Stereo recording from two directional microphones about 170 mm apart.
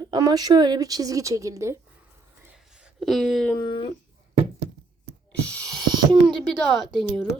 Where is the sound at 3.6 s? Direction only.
30° left (ahead or behind).